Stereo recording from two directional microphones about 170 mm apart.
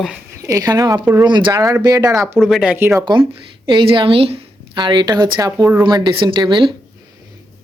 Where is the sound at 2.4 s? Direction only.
Centre (ahead or behind).